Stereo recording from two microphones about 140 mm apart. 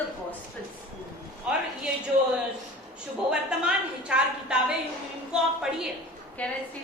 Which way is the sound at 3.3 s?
5° right (ahead or behind).